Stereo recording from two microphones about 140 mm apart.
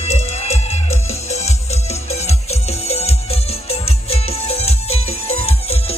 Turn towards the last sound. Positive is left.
turn(degrees=45)  # may be behind; listen again after turning